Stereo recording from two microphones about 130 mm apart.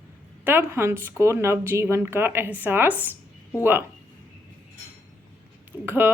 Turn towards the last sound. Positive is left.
turn(degrees=-20)  # may be behind; listen again after turning